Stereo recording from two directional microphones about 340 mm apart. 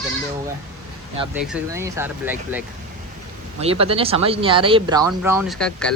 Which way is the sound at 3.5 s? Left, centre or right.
Centre.